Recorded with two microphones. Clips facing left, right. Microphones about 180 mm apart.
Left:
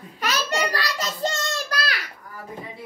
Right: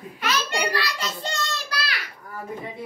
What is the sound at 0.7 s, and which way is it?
Child singing, 40° left (ahead or behind).